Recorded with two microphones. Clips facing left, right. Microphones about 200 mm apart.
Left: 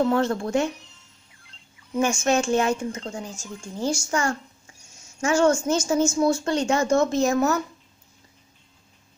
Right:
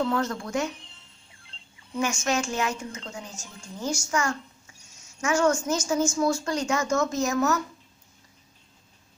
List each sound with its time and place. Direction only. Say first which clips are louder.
0.1 s speech: left 5 dB; 30° left (ahead or behind)
1.5 s a sound: right 2 dB; 30° right (ahead or behind)
2.0 s speech: left 5 dB; 30° left (ahead or behind)